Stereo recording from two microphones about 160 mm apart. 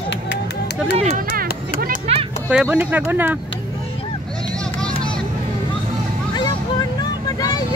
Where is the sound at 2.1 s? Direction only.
40° right (ahead or behind).